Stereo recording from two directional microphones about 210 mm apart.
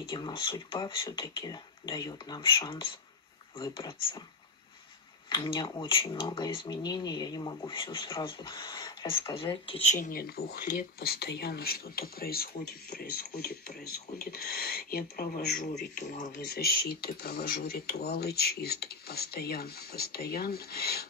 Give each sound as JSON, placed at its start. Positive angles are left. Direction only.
{"t": 0.0, "sound": "speech", "side_deg": 25}
{"t": 5.3, "sound": "speech", "side_deg": 20}
{"t": 9.9, "sound": "speech", "side_deg": 40}
{"t": 16.3, "sound": "speech", "side_deg": 50}